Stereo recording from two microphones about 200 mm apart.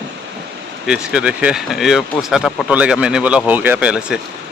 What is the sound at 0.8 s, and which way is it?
Speech, 5° right (ahead or behind).